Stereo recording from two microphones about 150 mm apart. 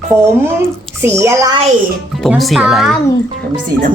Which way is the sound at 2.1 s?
Centre (ahead or behind).